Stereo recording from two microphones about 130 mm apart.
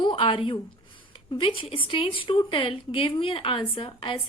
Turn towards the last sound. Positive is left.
turn(degrees=40)  # may be behind; listen again after turning